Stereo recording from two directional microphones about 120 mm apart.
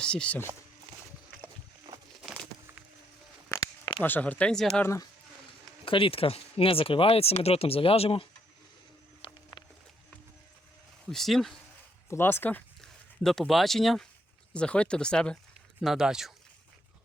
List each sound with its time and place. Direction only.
0.0 s speech: 10° left (ahead or behind)
4.0 s speech: 15° left (ahead or behind)
5.8 s speech: 50° left (ahead or behind)
9.2 s music: 50° left (ahead or behind)
11.1 s speech: centre (ahead or behind)
12.0 s speech: 20° left (ahead or behind)
13.2 s speech: 5° left (ahead or behind)
15.8 s speech: 5° right (ahead or behind)